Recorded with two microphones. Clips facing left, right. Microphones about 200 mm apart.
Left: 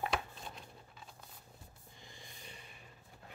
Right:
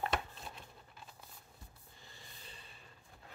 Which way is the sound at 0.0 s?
Centre (ahead or behind).